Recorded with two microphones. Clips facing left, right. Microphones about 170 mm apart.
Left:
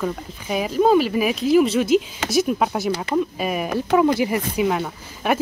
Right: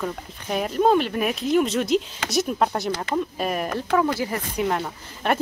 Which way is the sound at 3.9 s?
15° left (ahead or behind).